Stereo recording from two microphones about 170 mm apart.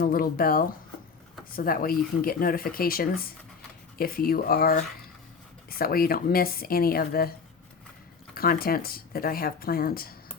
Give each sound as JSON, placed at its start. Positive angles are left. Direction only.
{"t": 0.0, "sound": "speech", "side_deg": 60}
{"t": 8.4, "sound": "speech", "side_deg": 60}